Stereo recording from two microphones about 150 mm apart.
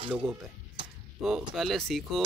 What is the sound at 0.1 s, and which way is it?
Speech, 10° right (ahead or behind).